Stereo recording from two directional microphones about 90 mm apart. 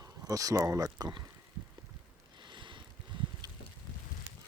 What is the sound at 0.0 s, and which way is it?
Speech, 40° right (ahead or behind).